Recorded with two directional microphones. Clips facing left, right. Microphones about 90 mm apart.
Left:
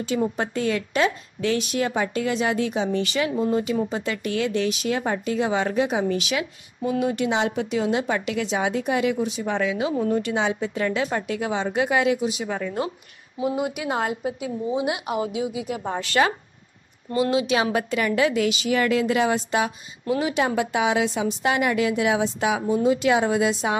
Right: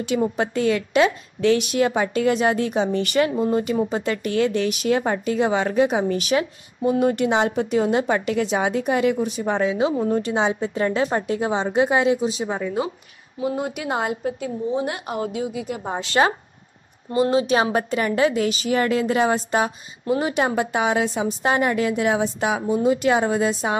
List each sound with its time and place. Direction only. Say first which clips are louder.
0.4 s a woman's voice: right 4 dB; 65° right (ahead or behind); by 5.2 s 40° right (ahead or behind)
5.2 s a woman's voice: right 2 dB; 55° right (ahead or behind)
7.0 s a woman's voice: right 3 dB; 50° right (ahead or behind); by 12.5 s 30° right (ahead or behind)
12.5 s speech: right 2 dB; 10° right (ahead or behind)
13.4 s a woman's voice: even; 5° left (ahead or behind)
15.8 s a woman's voice: right 2 dB; 20° right (ahead or behind)
17.2 s a woman's voice: right 3 dB; 40° right (ahead or behind)